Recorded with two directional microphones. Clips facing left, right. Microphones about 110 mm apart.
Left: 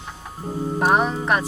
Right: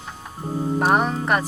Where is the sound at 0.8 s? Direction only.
Centre (ahead or behind).